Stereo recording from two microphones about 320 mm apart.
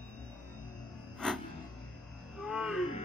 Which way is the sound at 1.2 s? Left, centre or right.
Centre.